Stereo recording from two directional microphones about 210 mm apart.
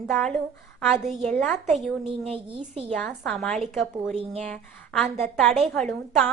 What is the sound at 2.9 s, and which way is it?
A woman's voice, 5° left (ahead or behind).